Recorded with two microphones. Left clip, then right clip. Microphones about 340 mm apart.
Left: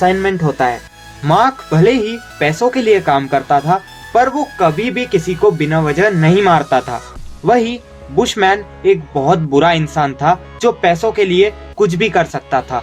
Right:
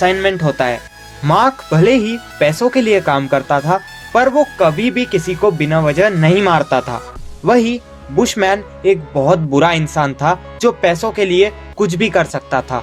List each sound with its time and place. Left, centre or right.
0.0 s speech: centre